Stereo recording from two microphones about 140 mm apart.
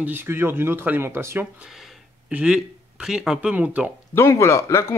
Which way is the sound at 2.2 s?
5° right (ahead or behind).